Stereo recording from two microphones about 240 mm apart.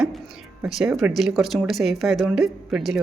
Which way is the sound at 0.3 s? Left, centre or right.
Centre.